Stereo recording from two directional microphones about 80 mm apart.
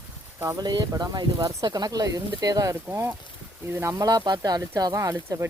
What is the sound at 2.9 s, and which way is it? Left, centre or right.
Speech, right.